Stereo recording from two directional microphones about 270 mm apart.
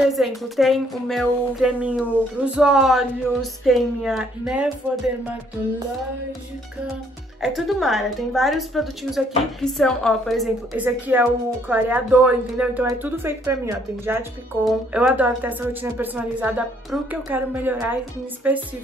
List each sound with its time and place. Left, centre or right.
0.0 s speech: centre
7.4 s speech: centre